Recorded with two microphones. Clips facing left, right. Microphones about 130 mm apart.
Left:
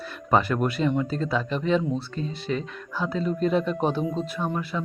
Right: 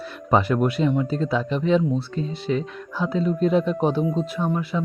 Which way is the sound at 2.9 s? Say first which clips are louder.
Right 3 dB; 15° right (ahead or behind).